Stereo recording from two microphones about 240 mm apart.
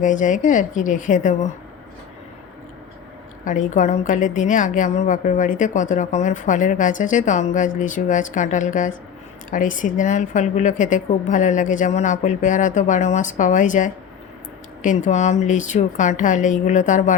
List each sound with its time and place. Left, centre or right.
0.0 s a woman's voice: left
3.4 s a woman's voice: left